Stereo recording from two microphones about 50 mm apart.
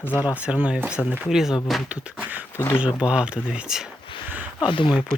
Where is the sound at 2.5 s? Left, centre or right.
Left.